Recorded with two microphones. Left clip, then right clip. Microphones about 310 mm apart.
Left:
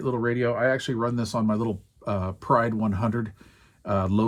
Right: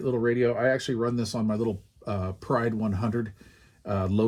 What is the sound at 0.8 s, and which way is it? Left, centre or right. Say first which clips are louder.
Speech: left 1 dB; centre.